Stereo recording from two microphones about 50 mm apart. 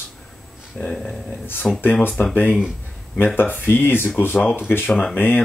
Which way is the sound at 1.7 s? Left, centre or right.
Centre.